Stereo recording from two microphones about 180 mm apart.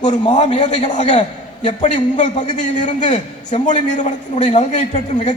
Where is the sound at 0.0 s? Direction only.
40° left (ahead or behind).